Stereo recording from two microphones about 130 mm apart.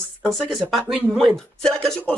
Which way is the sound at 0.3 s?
Centre (ahead or behind).